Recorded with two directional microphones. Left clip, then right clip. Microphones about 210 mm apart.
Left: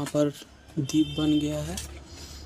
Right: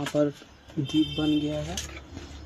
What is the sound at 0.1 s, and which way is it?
Speech, 25° left (ahead or behind).